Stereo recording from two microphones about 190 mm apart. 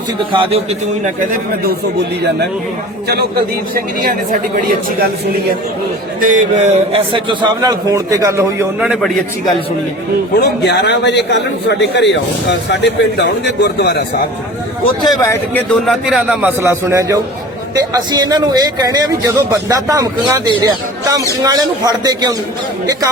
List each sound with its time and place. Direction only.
0.3 s a man's voice: 30° right (ahead or behind)
3.8 s speech: 45° right (ahead or behind)
6.1 s speech: 45° right (ahead or behind)
6.9 s a man's voice: 25° right (ahead or behind); by 9.1 s centre (ahead or behind)
10.3 s a man's voice: 60° left (ahead or behind)
15.0 s speech: 20° left (ahead or behind)
15.5 s a man's voice: 5° left (ahead or behind); by 22.4 s 20° right (ahead or behind)